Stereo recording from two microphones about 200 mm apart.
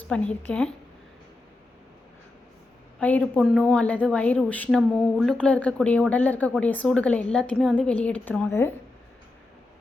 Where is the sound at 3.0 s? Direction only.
10° left (ahead or behind).